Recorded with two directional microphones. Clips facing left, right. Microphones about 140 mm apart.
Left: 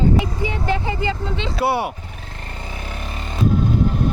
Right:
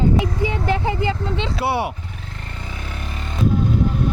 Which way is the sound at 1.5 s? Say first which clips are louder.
Left 3 dB; 25° right (ahead or behind).